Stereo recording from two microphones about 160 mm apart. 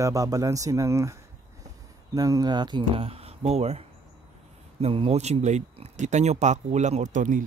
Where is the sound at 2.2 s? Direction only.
25° right (ahead or behind); by 7.4 s 55° right (ahead or behind).